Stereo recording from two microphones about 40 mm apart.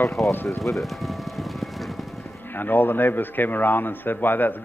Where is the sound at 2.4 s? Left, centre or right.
Left.